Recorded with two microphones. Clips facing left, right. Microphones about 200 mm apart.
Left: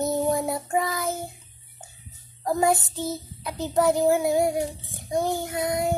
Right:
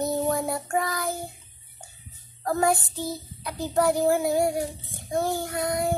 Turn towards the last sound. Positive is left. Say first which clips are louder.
# left 1 dB
turn(degrees=20)  # may be behind; listen again after turning